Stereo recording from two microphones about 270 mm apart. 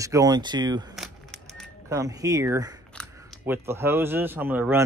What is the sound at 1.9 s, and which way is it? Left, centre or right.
Speech, centre.